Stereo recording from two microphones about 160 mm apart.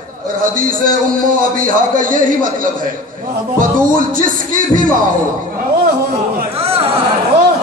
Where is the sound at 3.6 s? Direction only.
55° right (ahead or behind).